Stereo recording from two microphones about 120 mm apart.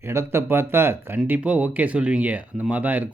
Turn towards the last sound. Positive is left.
turn(degrees=-15)  # may be behind; listen again after turning